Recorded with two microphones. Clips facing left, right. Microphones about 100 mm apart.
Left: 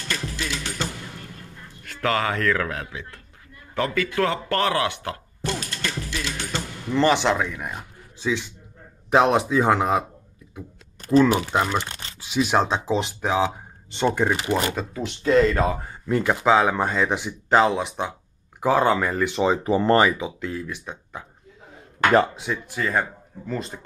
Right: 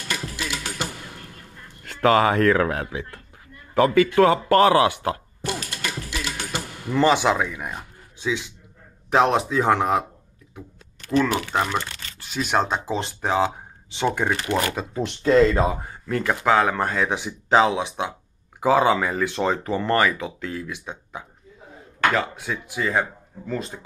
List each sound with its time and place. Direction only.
0.0 s music: 10° right (ahead or behind)
1.9 s speech: 25° right (ahead or behind)
5.7 s music: 10° right (ahead or behind)
9.1 s speech: 5° left (ahead or behind)
11.1 s speech: 25° left (ahead or behind)
11.5 s speech: 5° left (ahead or behind)
11.8 s camera: 25° left (ahead or behind)
12.2 s speech: 5° left (ahead or behind)
14.5 s speech: 15° left (ahead or behind)
15.0 s speech: 30° right (ahead or behind)
16.1 s speech: 10° left (ahead or behind)
20.2 s speech: 5° left (ahead or behind)
22.5 s speech: 5° right (ahead or behind)